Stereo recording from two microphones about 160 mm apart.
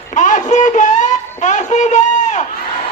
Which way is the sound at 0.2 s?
50° left (ahead or behind).